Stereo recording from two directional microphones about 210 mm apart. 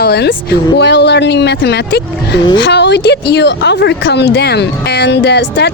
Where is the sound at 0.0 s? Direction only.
50° left (ahead or behind).